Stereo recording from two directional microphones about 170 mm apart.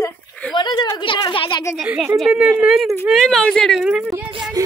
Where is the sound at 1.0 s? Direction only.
25° left (ahead or behind).